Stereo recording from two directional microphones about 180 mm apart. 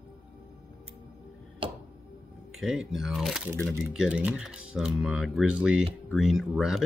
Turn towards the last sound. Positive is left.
turn(degrees=0)  # may be behind; listen again after turning